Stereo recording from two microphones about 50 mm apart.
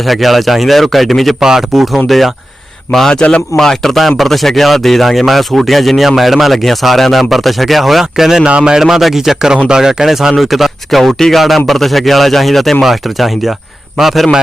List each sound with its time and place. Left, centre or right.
0.0 s speech: centre
1.4 s a man's voice: centre
3.2 s speech: left
3.6 s speech: centre
8.4 s speech: centre
8.8 s a man's voice: centre